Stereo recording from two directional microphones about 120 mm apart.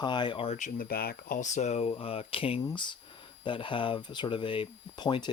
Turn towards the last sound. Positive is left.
turn(degrees=40)  # may be behind; listen again after turning